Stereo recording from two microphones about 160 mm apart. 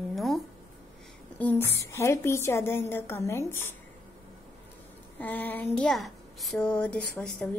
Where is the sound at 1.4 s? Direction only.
10° left (ahead or behind).